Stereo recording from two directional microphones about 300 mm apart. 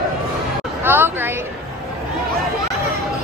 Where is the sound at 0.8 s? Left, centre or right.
Centre.